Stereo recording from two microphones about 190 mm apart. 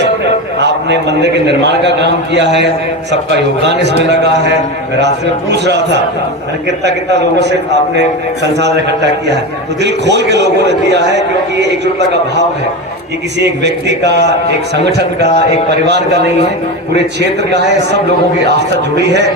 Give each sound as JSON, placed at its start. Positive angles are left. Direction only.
{"t": 0.6, "sound": "a man's voice", "side_deg": -65}
{"t": 8.5, "sound": "a man's voice", "side_deg": -65}
{"t": 13.4, "sound": "a man's voice", "side_deg": -65}